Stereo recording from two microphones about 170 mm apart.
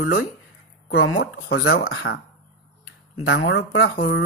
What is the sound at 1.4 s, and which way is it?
Speech, 70° left (ahead or behind).